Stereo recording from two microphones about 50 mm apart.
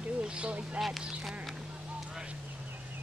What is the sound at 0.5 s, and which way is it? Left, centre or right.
Speech, right.